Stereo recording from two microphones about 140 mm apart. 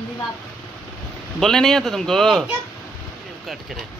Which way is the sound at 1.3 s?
5° left (ahead or behind).